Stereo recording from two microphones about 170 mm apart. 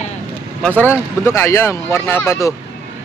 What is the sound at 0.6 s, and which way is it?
Speech, 10° left (ahead or behind).